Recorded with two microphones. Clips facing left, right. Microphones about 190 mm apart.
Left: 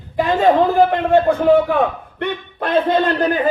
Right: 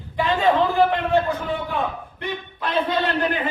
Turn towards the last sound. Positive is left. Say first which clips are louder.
# left 6 dB
turn(degrees=45)  # may be behind; listen again after turning